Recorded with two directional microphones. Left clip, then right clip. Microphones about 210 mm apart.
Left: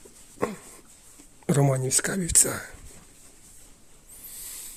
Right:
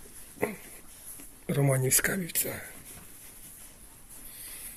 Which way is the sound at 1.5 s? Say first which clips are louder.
Left 6 dB; 30° left (ahead or behind).